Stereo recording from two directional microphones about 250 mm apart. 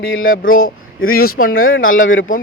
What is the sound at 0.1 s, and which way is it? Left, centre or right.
Speech, left.